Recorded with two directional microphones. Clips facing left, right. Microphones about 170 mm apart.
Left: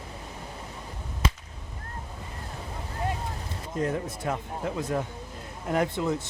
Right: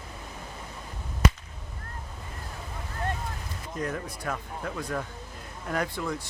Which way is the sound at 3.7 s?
25° left (ahead or behind).